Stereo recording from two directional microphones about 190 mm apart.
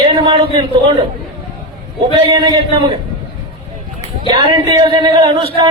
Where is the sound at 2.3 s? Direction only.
25° right (ahead or behind).